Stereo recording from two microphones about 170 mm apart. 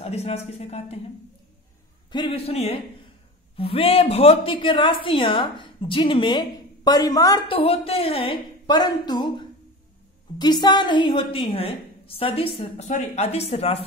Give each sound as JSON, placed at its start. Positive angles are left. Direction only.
{"t": 0.0, "sound": "a woman's voice", "side_deg": 40}
{"t": 2.1, "sound": "a woman's voice", "side_deg": 30}
{"t": 10.4, "sound": "a woman's voice", "side_deg": 25}